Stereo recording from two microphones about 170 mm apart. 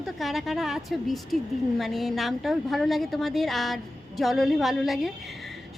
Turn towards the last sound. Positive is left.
turn(degrees=0)  # may be behind; listen again after turning